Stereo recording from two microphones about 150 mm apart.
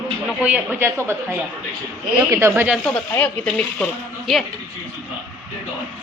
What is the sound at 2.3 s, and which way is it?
Speech, 15° right (ahead or behind).